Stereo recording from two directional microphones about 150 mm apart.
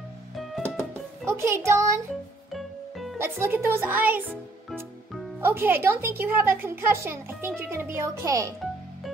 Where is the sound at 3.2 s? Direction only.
15° right (ahead or behind).